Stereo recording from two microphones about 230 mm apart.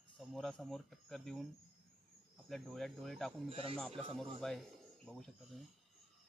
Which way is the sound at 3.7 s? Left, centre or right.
Centre.